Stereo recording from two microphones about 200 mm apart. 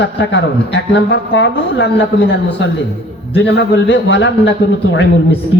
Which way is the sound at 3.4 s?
60° left (ahead or behind).